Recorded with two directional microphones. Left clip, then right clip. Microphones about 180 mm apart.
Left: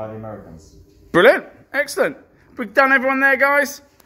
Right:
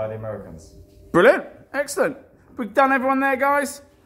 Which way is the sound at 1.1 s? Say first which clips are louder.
Left 2 dB; centre (ahead or behind).